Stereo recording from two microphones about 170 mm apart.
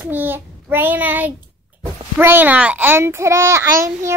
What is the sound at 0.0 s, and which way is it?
A child's voice, 10° right (ahead or behind).